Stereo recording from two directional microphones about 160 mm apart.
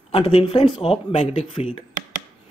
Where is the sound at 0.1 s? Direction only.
35° left (ahead or behind).